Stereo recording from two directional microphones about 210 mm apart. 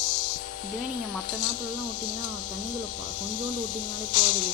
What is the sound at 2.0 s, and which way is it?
Speech, 40° left (ahead or behind).